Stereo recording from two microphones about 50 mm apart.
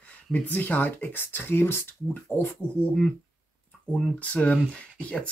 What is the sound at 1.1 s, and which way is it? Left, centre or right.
Speech, left.